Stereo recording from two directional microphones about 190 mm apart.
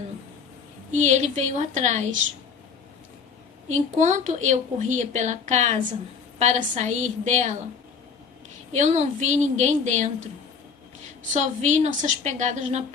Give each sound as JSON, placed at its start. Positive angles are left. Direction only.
{"t": 0.9, "sound": "a woman's voice", "side_deg": -35}
{"t": 3.9, "sound": "a woman's voice", "side_deg": -40}
{"t": 8.7, "sound": "a woman's voice", "side_deg": -35}
{"t": 11.3, "sound": "a woman's voice", "side_deg": -40}